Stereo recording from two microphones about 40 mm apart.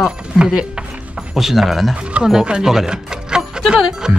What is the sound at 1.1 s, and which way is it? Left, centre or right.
Speech, centre.